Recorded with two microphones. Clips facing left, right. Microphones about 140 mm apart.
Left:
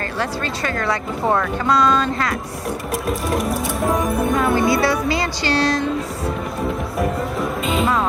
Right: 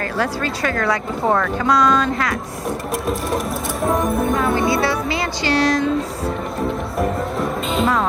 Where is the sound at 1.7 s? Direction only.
25° left (ahead or behind).